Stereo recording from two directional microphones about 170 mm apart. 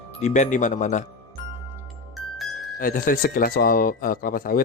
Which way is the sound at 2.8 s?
55° left (ahead or behind).